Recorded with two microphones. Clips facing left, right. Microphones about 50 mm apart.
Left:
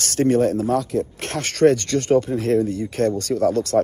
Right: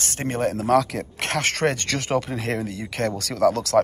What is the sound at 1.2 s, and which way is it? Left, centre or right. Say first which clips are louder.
Speech: left 5 dB; right.